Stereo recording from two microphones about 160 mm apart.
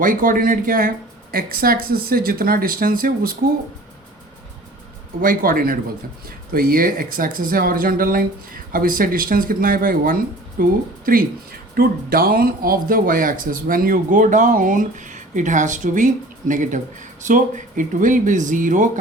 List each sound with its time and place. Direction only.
0.0 s speech: 60° right (ahead or behind)
5.2 s speech: 60° right (ahead or behind)